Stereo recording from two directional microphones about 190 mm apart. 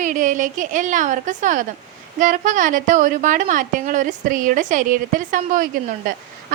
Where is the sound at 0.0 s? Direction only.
40° right (ahead or behind).